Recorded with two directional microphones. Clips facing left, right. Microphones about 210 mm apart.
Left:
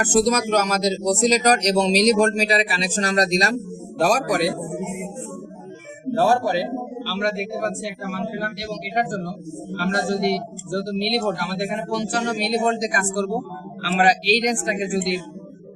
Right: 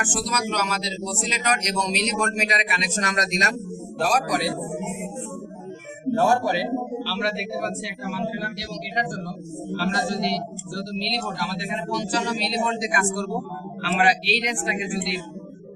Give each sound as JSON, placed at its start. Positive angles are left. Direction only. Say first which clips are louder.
{"t": 0.0, "sound": "a man's voice", "louder": "left 9 dB", "side_deg": 40}
{"t": 6.1, "sound": "a man's voice", "louder": "left 2 dB", "side_deg": 35}